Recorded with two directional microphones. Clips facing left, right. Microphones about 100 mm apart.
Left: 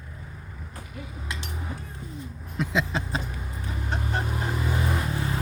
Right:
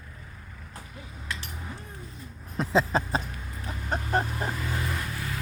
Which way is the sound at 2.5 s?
35° right (ahead or behind).